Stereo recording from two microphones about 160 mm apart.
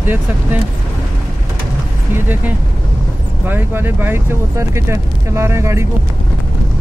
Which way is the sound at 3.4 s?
10° right (ahead or behind).